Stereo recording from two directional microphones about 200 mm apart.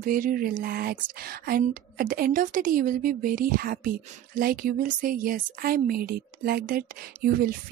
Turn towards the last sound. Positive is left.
turn(degrees=-45)  # may be behind; listen again after turning